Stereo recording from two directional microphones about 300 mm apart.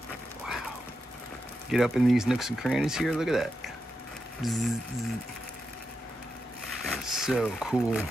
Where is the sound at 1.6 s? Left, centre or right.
Centre.